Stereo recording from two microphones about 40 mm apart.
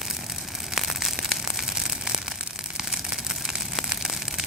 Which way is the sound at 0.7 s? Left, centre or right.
Centre.